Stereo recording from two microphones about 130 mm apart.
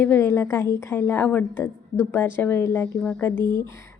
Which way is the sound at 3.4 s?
30° right (ahead or behind).